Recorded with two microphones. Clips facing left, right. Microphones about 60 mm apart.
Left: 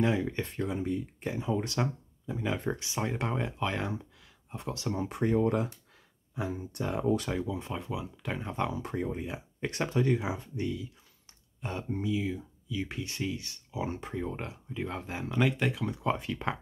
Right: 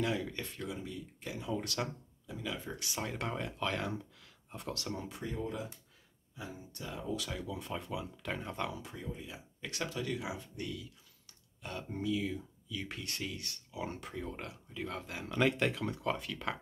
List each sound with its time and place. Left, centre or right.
0.0 s speech: left
2.5 s speech: left
2.8 s speech: left
5.1 s speech: left
7.2 s speech: left
7.7 s speech: centre
8.5 s speech: left
8.8 s speech: left
15.2 s speech: centre
16.0 s speech: left